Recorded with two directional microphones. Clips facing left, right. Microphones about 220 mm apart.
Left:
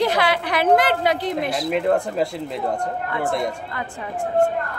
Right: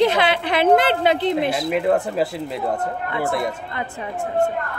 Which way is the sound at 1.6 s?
5° right (ahead or behind).